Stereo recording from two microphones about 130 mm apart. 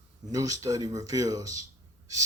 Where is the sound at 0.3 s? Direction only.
25° right (ahead or behind).